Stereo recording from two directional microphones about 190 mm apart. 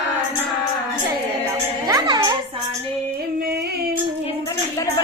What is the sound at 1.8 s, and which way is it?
Music, 20° right (ahead or behind).